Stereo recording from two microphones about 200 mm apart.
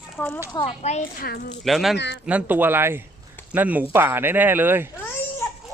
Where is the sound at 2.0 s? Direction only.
60° left (ahead or behind).